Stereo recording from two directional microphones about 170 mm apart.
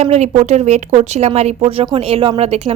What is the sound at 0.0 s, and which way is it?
Speech, 40° right (ahead or behind).